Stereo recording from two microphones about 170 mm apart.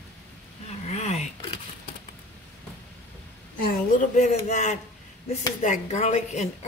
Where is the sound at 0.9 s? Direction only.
40° left (ahead or behind).